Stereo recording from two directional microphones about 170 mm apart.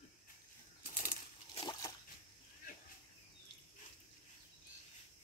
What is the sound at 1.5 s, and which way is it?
Slosh, 25° left (ahead or behind).